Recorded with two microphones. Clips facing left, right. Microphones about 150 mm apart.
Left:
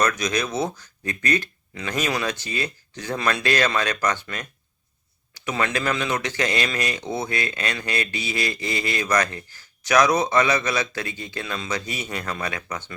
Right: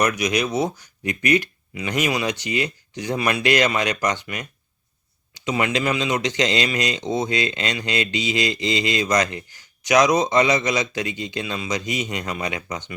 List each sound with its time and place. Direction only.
0.0 s speech: 15° right (ahead or behind)